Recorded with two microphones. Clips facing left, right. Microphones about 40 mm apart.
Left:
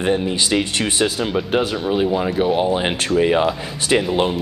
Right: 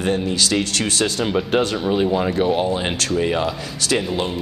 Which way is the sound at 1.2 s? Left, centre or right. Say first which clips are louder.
Even; centre.